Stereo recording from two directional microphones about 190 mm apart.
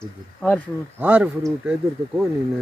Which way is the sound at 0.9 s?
10° right (ahead or behind).